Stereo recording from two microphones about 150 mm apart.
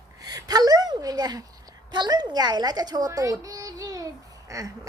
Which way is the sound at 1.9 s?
30° right (ahead or behind).